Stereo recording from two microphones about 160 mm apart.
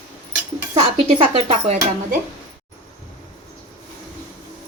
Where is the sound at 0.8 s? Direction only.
40° right (ahead or behind).